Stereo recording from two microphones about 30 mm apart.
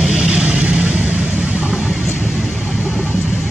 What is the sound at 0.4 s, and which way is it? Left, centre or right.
Vehicle, right.